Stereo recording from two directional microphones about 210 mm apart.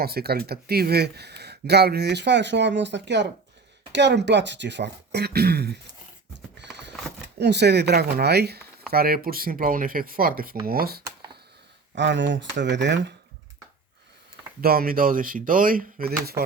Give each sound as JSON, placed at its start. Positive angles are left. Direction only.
{"t": 0.0, "sound": "speech", "side_deg": -50}
{"t": 6.3, "sound": "horse", "side_deg": -55}
{"t": 7.3, "sound": "speech", "side_deg": -55}
{"t": 11.9, "sound": "speech", "side_deg": -60}
{"t": 14.6, "sound": "speech", "side_deg": -45}